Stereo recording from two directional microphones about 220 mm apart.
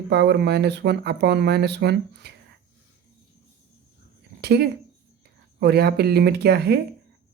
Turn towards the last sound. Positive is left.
turn(degrees=-45)  # may be behind; listen again after turning